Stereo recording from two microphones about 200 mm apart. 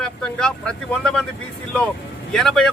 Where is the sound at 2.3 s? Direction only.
Centre (ahead or behind).